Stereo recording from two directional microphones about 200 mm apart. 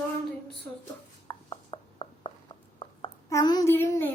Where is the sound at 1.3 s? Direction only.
25° left (ahead or behind).